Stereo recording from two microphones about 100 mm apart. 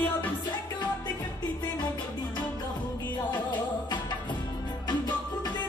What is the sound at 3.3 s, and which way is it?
Music, 50° left (ahead or behind).